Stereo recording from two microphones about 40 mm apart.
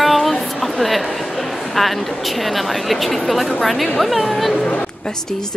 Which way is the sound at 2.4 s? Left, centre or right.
Centre.